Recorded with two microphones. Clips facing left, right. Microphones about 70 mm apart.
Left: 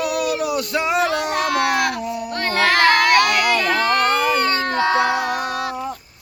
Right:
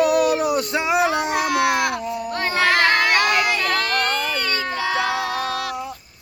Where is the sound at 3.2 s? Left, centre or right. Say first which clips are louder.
Left 2 dB; centre.